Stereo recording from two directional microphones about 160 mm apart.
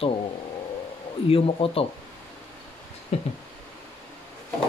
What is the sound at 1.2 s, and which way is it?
Speech, 35° left (ahead or behind).